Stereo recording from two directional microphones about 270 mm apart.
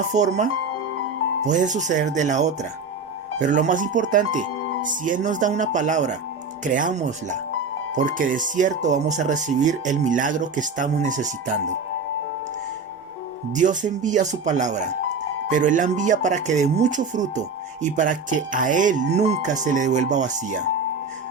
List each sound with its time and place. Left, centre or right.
0.1 s speech: right
1.5 s speech: right
13.6 s speech: right